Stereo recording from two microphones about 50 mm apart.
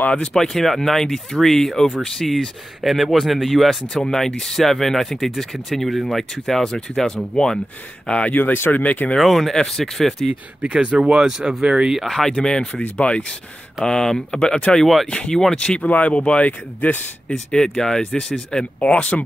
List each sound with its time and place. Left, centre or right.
0.1 s speech: left
0.4 s speech: centre
8.3 s speech: left
8.5 s speech: left
8.8 s speech: left
9.2 s speech: centre
10.6 s speech: right
11.6 s speech: right
12.3 s speech: centre
13.8 s speech: centre
15.9 s speech: left
17.3 s speech: centre
18.8 s speech: left